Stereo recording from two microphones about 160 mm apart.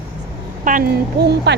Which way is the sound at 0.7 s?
55° right (ahead or behind).